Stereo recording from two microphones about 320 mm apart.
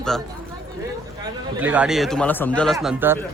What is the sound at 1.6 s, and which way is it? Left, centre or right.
A man's voice, centre.